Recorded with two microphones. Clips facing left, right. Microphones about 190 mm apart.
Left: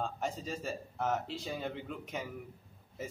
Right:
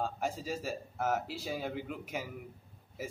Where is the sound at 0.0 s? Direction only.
5° right (ahead or behind).